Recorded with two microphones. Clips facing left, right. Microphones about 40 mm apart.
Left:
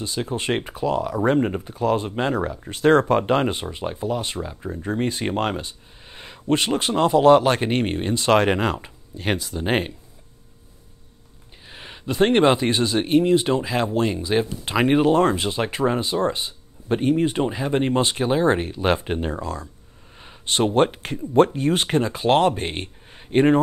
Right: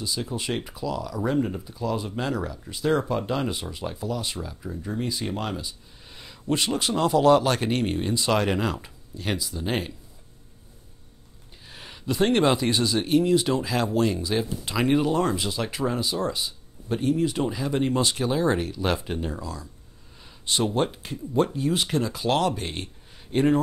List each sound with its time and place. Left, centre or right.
0.0 s speech: left
2.7 s speech: left
4.8 s speech: left
6.0 s speech: left
11.6 s a sound: left
12.1 s speech: left